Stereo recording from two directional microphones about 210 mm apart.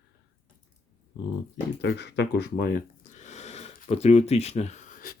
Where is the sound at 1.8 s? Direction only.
55° left (ahead or behind).